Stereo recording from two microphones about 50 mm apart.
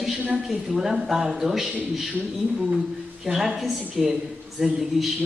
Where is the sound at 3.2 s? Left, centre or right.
Centre.